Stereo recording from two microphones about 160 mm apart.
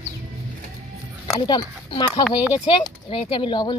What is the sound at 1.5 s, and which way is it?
A woman's voice, 30° left (ahead or behind).